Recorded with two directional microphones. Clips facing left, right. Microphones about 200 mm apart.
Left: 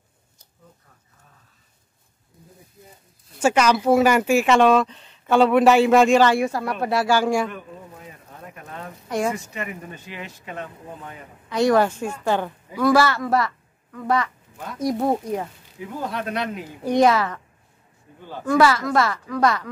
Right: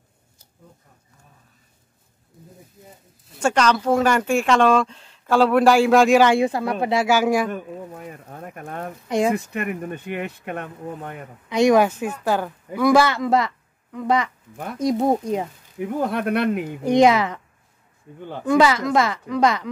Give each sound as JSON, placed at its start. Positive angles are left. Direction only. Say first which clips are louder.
{"t": 3.3, "sound": "speech", "louder": "left 1 dB", "side_deg": 5}
{"t": 6.1, "sound": "a woman's voice", "louder": "right 2 dB", "side_deg": -15}
{"t": 7.1, "sound": "a woman's voice", "louder": "right 1 dB", "side_deg": -5}
{"t": 7.5, "sound": "speech", "louder": "right 6 dB", "side_deg": -50}
{"t": 11.4, "sound": "a woman's voice", "louder": "right 2 dB", "side_deg": -15}
{"t": 15.8, "sound": "speech", "louder": "right 6 dB", "side_deg": -55}
{"t": 16.8, "sound": "a woman's voice", "louder": "right 2 dB", "side_deg": -20}
{"t": 18.4, "sound": "a woman's voice", "louder": "right 1 dB", "side_deg": -20}